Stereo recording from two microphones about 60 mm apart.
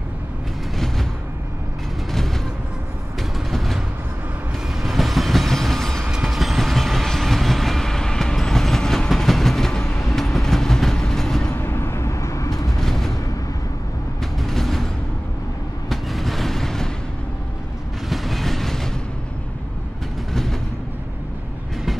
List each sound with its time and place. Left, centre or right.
3.2 s vehicle: centre
4.8 s train: centre
10.1 s vehicle: centre
11.5 s a sound: left
12.8 s a sound: centre
14.2 s music: centre
15.9 s vehicle: centre
18.1 s train: centre